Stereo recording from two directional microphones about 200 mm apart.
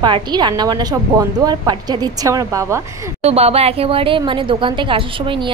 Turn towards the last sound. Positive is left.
turn(degrees=-25)  # may be behind; listen again after turning